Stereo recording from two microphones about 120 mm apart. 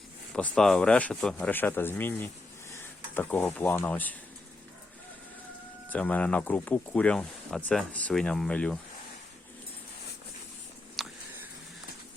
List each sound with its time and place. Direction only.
0.3 s speech: 5° left (ahead or behind)
5.9 s speech: 10° left (ahead or behind)
11.0 s a sound: centre (ahead or behind)